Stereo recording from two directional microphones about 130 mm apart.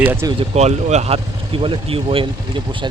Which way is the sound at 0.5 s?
60° right (ahead or behind).